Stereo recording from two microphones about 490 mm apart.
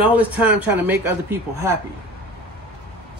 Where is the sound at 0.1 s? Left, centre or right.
Centre.